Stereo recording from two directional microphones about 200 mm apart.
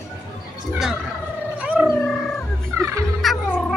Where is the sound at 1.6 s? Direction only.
5° right (ahead or behind).